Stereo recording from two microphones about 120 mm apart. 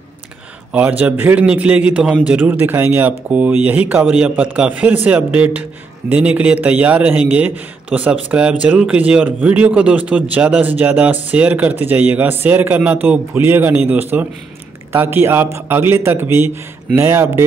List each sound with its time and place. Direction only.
0.7 s speech: 10° right (ahead or behind)